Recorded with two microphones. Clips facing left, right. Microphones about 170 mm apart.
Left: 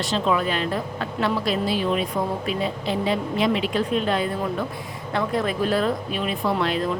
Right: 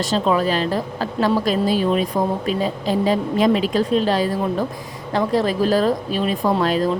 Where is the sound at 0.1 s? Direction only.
35° right (ahead or behind).